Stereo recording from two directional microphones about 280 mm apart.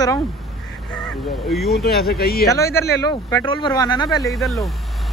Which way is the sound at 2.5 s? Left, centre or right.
Centre.